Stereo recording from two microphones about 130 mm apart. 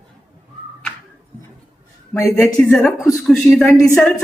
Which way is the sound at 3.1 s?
Centre (ahead or behind).